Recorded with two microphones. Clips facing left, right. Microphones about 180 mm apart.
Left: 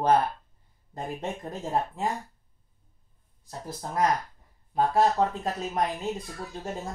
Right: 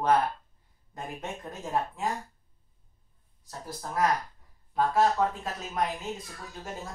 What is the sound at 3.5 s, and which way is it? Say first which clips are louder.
Speech: left 2 dB; 20° left (ahead or behind).